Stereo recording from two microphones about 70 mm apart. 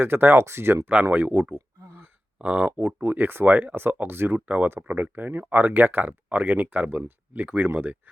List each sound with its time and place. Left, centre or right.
0.0 s speech: right
1.5 s a sound: right
2.4 s speech: right